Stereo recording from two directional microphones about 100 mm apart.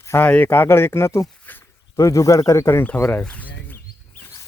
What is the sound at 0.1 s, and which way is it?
Speech, 20° left (ahead or behind).